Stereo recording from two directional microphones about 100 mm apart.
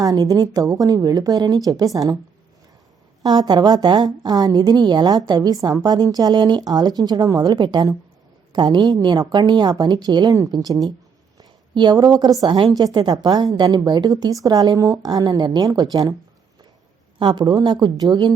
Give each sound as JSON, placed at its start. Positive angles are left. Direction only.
{"t": 0.0, "sound": "a woman's voice", "side_deg": -40}
{"t": 3.2, "sound": "a woman's voice", "side_deg": -45}
{"t": 17.2, "sound": "a woman's voice", "side_deg": -45}